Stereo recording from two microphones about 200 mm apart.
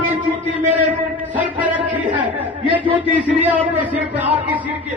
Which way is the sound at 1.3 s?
10° right (ahead or behind).